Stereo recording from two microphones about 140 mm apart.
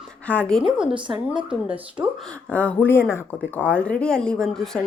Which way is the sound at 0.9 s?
35° right (ahead or behind).